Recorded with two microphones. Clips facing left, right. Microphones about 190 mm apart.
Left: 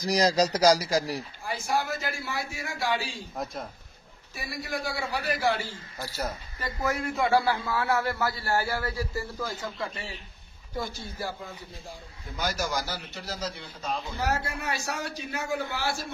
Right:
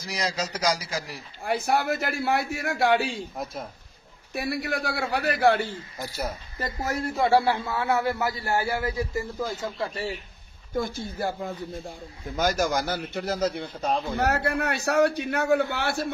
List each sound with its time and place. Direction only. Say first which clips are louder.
0.0 s speech: left 7 dB; 35° left (ahead or behind)
1.4 s a man's voice: right 6 dB; 60° right (ahead or behind)
4.3 s a man's voice: right 6 dB; 65° right (ahead or behind)
5.9 s speech: right 1 dB; 15° right (ahead or behind)
6.6 s speech: right 1 dB; 40° right (ahead or behind)
7.2 s a man's voice: right 4 dB; 30° right (ahead or behind)
10.8 s a man's voice: right 6 dB; 50° right (ahead or behind)